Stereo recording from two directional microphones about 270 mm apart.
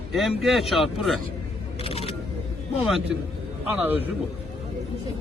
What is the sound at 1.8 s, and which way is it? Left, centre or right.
Single-lens reflex camera, centre.